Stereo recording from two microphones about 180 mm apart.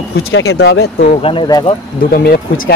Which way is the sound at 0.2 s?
65° left (ahead or behind).